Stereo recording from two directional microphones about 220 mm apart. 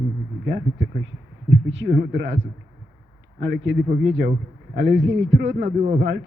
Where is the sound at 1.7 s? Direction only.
55° right (ahead or behind).